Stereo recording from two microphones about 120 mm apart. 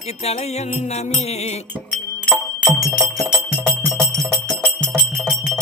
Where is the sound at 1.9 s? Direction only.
5° left (ahead or behind).